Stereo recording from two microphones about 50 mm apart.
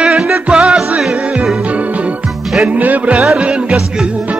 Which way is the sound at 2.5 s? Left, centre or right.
Right.